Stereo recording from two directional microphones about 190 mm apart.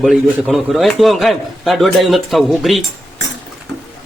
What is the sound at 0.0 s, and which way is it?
Speech, centre (ahead or behind).